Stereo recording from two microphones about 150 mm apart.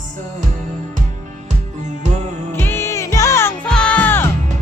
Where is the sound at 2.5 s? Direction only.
15° left (ahead or behind).